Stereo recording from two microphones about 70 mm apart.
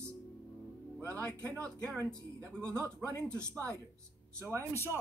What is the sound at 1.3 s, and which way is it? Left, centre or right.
Speech, right.